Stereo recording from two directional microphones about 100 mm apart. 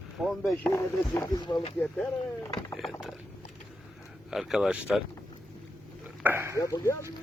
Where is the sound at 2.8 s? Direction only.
Centre (ahead or behind).